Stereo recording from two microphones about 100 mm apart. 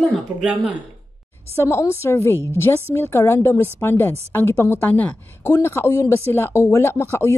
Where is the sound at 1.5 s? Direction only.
25° left (ahead or behind).